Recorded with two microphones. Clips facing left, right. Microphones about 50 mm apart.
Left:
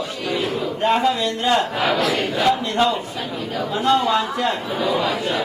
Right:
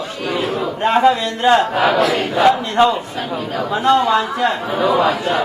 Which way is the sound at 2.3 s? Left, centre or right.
Right.